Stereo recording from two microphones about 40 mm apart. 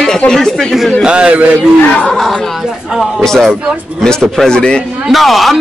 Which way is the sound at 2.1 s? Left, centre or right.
Centre.